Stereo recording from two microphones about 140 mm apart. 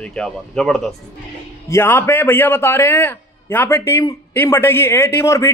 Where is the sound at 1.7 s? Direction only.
20° left (ahead or behind).